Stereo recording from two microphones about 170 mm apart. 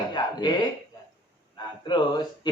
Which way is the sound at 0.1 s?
25° left (ahead or behind).